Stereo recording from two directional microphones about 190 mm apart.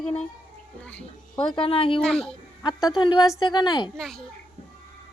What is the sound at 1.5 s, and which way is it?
Speech, 30° left (ahead or behind).